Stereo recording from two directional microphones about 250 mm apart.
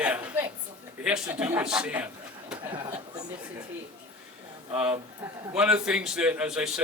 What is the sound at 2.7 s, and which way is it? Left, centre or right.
Speech, centre.